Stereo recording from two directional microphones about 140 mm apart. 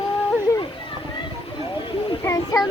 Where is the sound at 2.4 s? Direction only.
30° left (ahead or behind).